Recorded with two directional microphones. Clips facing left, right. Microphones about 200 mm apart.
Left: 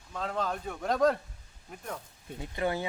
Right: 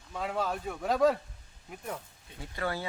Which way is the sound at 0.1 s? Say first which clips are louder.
Even; 10° right (ahead or behind).